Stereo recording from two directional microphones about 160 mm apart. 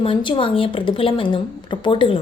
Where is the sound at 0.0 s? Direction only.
30° left (ahead or behind).